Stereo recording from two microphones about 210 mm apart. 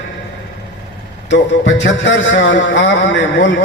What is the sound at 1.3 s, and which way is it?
A man's voice, 60° left (ahead or behind).